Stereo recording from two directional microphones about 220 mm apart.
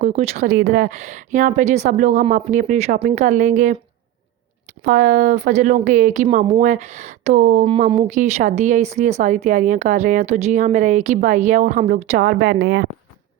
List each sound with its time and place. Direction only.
0.0 s speech: 30° right (ahead or behind)
4.8 s speech: 35° right (ahead or behind)